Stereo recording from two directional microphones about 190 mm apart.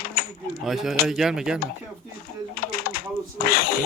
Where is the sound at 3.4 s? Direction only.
50° left (ahead or behind).